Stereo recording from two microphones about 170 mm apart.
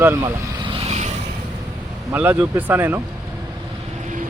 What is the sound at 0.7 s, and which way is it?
Vehicle, 40° right (ahead or behind).